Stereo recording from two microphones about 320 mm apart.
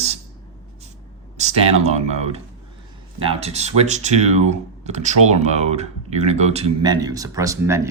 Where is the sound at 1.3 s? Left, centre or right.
Centre.